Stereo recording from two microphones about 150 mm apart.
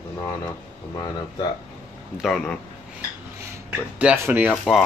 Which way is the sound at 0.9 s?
30° left (ahead or behind).